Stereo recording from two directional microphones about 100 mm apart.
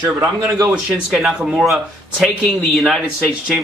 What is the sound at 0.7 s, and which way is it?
Speech, centre (ahead or behind).